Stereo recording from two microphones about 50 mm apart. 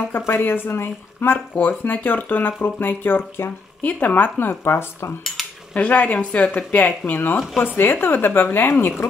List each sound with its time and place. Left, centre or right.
0.4 s speech: left
3.8 s speech: left
5.7 s speech: left
7.5 s speech: left